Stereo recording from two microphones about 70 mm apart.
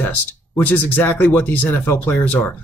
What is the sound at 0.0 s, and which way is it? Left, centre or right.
Speech, left.